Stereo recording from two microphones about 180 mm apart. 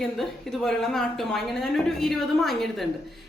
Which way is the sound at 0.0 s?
Centre (ahead or behind).